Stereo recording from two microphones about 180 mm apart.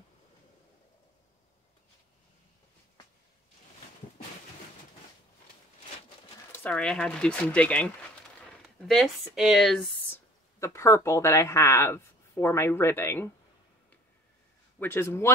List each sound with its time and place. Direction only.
6.6 s speech: 5° left (ahead or behind)
10.1 s speech: 15° left (ahead or behind)
14.8 s speech: 15° left (ahead or behind)